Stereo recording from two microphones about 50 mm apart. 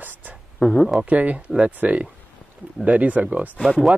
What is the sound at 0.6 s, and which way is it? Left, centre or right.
Speech, centre.